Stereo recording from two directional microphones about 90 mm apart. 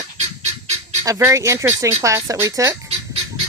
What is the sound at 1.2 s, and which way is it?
Speech, 35° right (ahead or behind).